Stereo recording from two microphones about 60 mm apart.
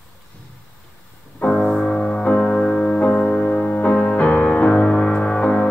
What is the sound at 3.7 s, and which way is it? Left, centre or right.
Music, left.